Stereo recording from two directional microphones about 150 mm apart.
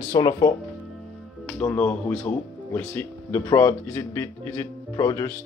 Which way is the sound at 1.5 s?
10° left (ahead or behind).